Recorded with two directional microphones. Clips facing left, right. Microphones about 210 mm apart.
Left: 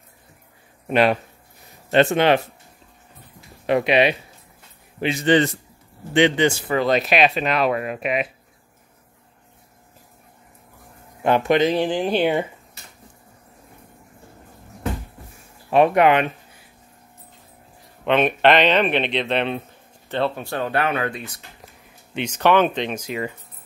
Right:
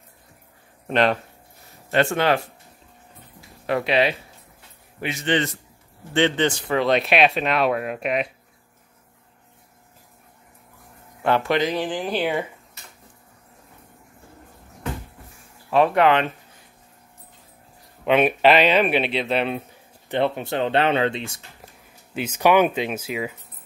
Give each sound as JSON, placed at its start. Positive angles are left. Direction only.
{"t": 0.8, "sound": "speech", "side_deg": 10}
{"t": 1.9, "sound": "speech", "side_deg": 20}
{"t": 3.6, "sound": "speech", "side_deg": 20}
{"t": 5.0, "sound": "a man's voice", "side_deg": 35}
{"t": 6.1, "sound": "speech", "side_deg": 10}
{"t": 11.2, "sound": "speech", "side_deg": 15}
{"t": 15.7, "sound": "speech", "side_deg": 15}
{"t": 18.0, "sound": "speech", "side_deg": -5}
{"t": 20.1, "sound": "speech", "side_deg": -15}
{"t": 22.1, "sound": "speech", "side_deg": -5}